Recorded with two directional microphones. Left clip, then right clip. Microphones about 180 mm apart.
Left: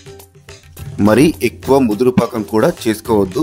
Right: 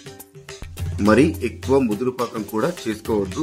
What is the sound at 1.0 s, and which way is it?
Speech, 55° left (ahead or behind).